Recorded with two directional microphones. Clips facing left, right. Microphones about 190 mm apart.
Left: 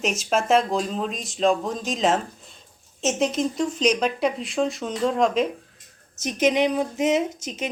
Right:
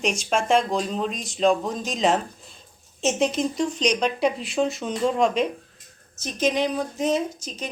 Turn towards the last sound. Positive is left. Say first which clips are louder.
# left 2 dB
turn(degrees=20)  # may be behind; listen again after turning